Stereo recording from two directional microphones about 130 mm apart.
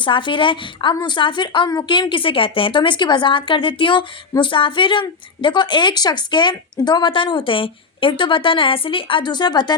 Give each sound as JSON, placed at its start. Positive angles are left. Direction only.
{"t": 0.0, "sound": "a woman's voice", "side_deg": 40}